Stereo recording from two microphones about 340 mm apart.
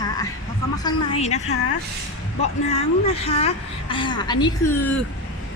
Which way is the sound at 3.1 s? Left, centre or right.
Centre.